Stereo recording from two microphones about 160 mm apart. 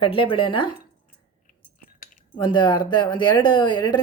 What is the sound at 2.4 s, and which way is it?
Speech, 30° left (ahead or behind).